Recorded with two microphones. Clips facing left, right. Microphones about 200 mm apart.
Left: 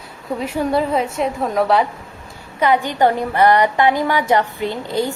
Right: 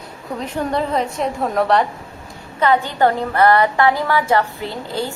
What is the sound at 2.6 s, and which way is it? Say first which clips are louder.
A woman's voice: even; 15° left (ahead or behind).